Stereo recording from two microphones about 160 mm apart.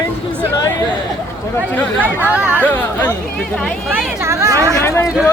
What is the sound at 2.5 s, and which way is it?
Speech, 10° left (ahead or behind).